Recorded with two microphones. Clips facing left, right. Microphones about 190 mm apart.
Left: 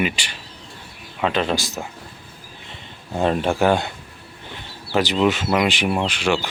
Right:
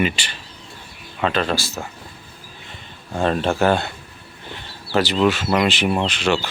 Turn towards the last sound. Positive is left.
turn(degrees=10)  # may be behind; listen again after turning